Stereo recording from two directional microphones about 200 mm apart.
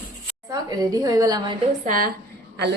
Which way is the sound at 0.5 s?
20° right (ahead or behind).